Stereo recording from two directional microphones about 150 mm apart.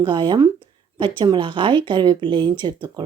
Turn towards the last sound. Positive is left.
turn(degrees=-30)  # may be behind; listen again after turning